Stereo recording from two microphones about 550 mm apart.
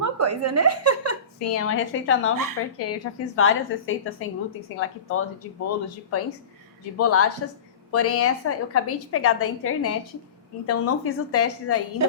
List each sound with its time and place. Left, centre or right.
0.0 s a woman's voice: right
1.4 s a woman's voice: left